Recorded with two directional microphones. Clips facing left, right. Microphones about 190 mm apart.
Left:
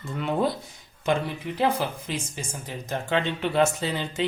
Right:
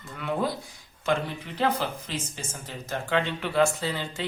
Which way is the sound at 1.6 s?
15° left (ahead or behind).